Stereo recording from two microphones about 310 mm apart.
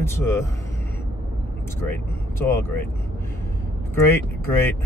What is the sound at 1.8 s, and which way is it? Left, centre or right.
Speech, centre.